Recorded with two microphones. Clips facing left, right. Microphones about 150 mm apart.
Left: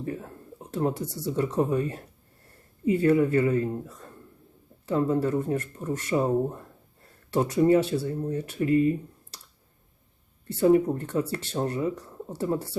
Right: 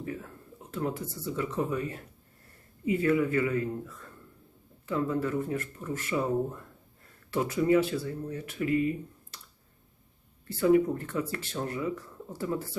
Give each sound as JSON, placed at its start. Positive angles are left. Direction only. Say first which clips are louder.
{"t": 0.0, "sound": "a sound", "louder": "left 4 dB", "side_deg": 35}
{"t": 0.9, "sound": "speech", "louder": "left 4 dB", "side_deg": 80}
{"t": 1.2, "sound": "speech", "louder": "left 6 dB", "side_deg": 40}
{"t": 10.6, "sound": "speech", "louder": "left 3 dB", "side_deg": 35}